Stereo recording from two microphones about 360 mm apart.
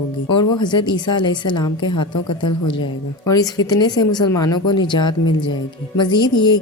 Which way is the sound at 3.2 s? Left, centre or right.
Centre.